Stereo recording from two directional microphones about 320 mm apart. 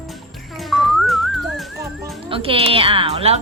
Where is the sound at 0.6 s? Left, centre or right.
Centre.